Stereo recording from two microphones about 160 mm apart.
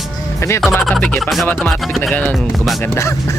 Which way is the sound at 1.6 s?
5° left (ahead or behind).